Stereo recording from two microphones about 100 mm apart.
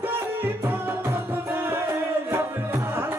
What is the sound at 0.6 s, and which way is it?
Music, 20° right (ahead or behind).